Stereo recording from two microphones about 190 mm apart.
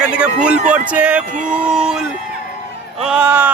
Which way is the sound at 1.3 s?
40° right (ahead or behind).